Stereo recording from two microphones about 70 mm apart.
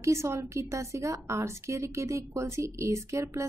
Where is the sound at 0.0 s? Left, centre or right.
Right.